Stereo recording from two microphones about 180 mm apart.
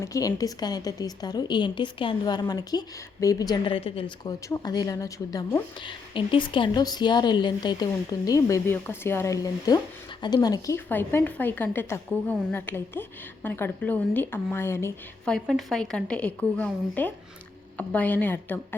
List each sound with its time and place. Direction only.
0.0 s a woman's voice: 20° left (ahead or behind)
15.2 s a woman's voice: centre (ahead or behind)